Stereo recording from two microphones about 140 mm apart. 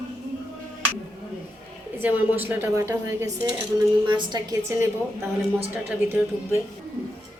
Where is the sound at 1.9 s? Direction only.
15° right (ahead or behind).